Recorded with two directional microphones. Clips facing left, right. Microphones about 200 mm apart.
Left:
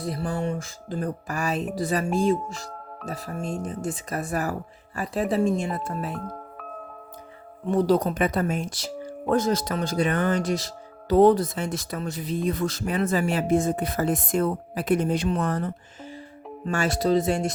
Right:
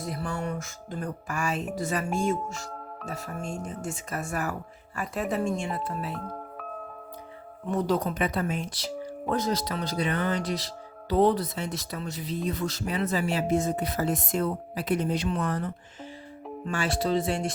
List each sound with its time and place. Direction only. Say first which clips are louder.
0.0 s music: left 4 dB; 35° left (ahead or behind)
7.7 s speech: left 5 dB; 35° left (ahead or behind)
16.6 s music: left 5 dB; 45° left (ahead or behind)